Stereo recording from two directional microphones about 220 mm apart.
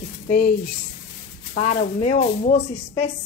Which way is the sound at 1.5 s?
35° left (ahead or behind).